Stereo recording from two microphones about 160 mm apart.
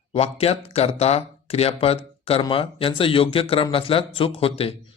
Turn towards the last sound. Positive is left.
turn(degrees=35)  # may be behind; listen again after turning